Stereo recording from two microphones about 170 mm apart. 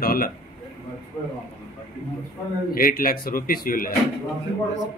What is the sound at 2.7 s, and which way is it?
Speech, 55° left (ahead or behind).